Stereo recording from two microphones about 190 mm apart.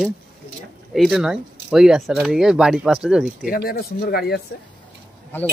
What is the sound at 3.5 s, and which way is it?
Speech, 55° left (ahead or behind).